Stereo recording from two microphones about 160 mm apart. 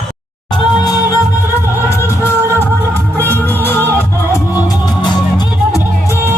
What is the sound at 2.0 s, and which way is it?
Music, 15° left (ahead or behind).